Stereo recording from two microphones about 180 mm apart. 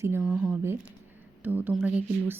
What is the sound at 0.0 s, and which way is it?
A woman's voice, 10° right (ahead or behind).